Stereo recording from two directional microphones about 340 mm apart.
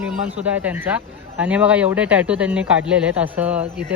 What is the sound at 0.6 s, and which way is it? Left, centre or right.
Speech, centre.